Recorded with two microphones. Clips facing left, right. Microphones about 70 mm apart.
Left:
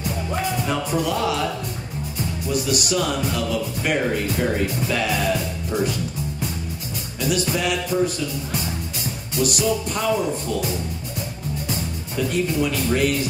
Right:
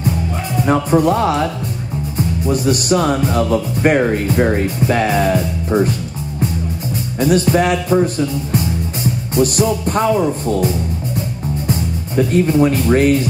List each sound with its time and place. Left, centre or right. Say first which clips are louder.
0.7 s speech: right 14 dB; right
7.2 s speech: right 9 dB; right
12.2 s speech: right 9 dB; right